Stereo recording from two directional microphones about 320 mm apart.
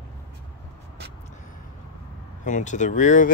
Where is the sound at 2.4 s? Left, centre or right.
Left.